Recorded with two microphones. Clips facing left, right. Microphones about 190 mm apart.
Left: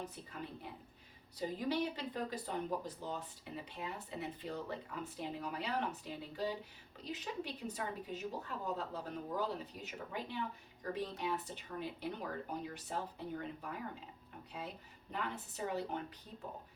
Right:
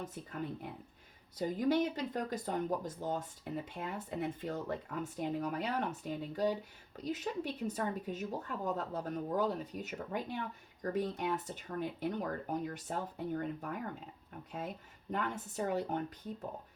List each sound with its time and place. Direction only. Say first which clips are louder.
0.0 s speech: right 5 dB; 45° right (ahead or behind)
15.1 s speech: right 5 dB; 45° right (ahead or behind)